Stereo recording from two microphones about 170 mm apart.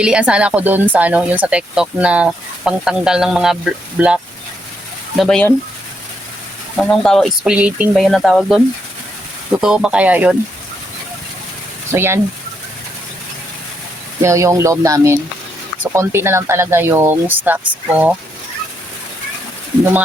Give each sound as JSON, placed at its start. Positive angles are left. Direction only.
{"t": 0.0, "sound": "speech", "side_deg": -5}
{"t": 6.7, "sound": "speech", "side_deg": 5}
{"t": 11.9, "sound": "speech", "side_deg": -15}
{"t": 14.2, "sound": "speech", "side_deg": -15}
{"t": 19.8, "sound": "speech", "side_deg": -10}